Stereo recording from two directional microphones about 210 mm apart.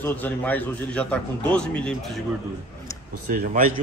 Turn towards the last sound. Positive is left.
turn(degrees=-40)  # may be behind; listen again after turning